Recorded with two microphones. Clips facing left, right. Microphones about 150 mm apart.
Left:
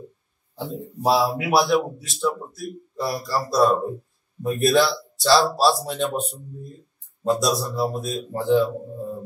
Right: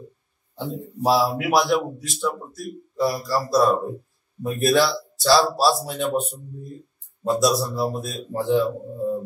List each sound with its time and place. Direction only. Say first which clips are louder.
0.6 s a man's voice: right 2 dB; centre (ahead or behind)
7.2 s a man's voice: right 1 dB; centre (ahead or behind)